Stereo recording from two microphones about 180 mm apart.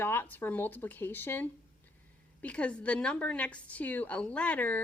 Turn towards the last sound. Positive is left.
turn(degrees=10)  # may be behind; listen again after turning